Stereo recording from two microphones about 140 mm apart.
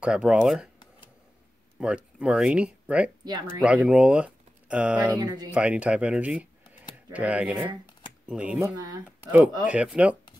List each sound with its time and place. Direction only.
0.0 s speech: 5° right (ahead or behind)
1.8 s speech: 5° right (ahead or behind)
3.3 s speech: 30° right (ahead or behind)
3.6 s speech: 10° right (ahead or behind)
5.1 s speech: 30° right (ahead or behind)
5.5 s speech: 10° right (ahead or behind)